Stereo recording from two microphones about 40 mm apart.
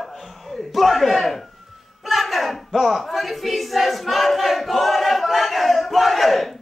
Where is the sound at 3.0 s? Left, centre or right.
Centre.